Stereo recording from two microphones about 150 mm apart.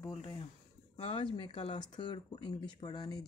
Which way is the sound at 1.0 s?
35° left (ahead or behind).